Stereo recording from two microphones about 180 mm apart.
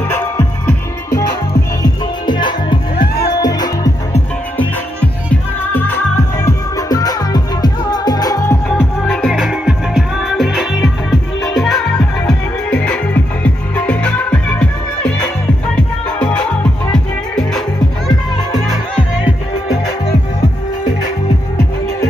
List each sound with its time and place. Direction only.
0.1 s music: 10° left (ahead or behind)
1.8 s music: 25° left (ahead or behind)
3.0 s music: 60° left (ahead or behind)
3.3 s music: 20° left (ahead or behind)
5.3 s music: 10° left (ahead or behind)
8.6 s music: centre (ahead or behind)